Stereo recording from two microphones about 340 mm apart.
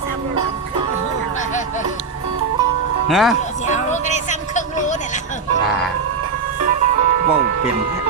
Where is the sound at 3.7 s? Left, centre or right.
Left.